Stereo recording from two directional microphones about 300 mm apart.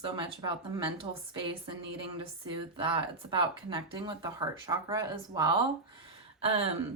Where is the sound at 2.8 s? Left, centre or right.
Centre.